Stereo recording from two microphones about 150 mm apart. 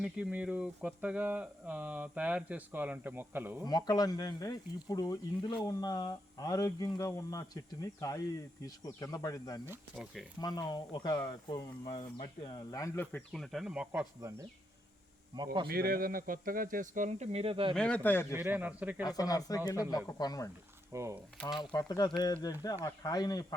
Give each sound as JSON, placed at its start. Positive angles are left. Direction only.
{"t": 0.0, "sound": "hum", "side_deg": -10}
{"t": 3.6, "sound": "speech", "side_deg": 25}
{"t": 9.9, "sound": "speech", "side_deg": -5}
{"t": 10.4, "sound": "speech", "side_deg": 25}
{"t": 13.1, "sound": "speech", "side_deg": 5}
{"t": 14.2, "sound": "speech", "side_deg": -20}
{"t": 15.6, "sound": "speech", "side_deg": -90}
{"t": 17.7, "sound": "a man's voice", "side_deg": 5}
{"t": 18.3, "sound": "hum", "side_deg": -15}
{"t": 19.0, "sound": "speech", "side_deg": 25}
{"t": 20.9, "sound": "speech", "side_deg": -20}
{"t": 21.6, "sound": "speech", "side_deg": 30}